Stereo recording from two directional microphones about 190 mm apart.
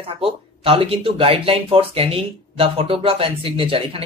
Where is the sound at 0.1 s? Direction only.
30° right (ahead or behind).